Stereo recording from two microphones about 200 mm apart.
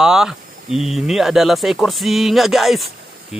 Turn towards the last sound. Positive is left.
turn(degrees=0)  # may be behind; listen again after turning